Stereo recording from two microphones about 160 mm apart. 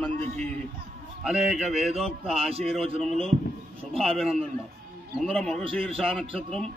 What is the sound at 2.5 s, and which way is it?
Speech, 40° right (ahead or behind).